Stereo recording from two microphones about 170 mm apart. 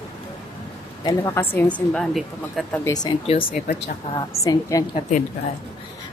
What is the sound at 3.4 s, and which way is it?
Speech, 65° left (ahead or behind).